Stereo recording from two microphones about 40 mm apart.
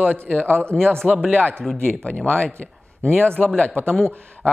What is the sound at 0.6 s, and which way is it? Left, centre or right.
Speech, left.